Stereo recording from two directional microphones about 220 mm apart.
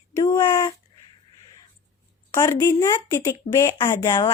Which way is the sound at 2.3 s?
15° left (ahead or behind).